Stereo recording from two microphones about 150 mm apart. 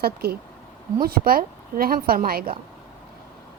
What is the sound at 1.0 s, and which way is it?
A woman's voice, 80° right.